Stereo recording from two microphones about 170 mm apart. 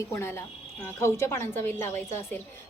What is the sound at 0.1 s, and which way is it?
A woman's voice, 15° left (ahead or behind).